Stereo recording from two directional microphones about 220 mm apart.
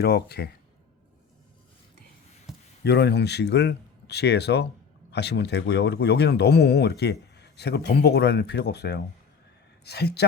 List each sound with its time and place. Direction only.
0.0 s speech: 45° left (ahead or behind)
2.5 s a sound: centre (ahead or behind)
2.8 s speech: 50° left (ahead or behind)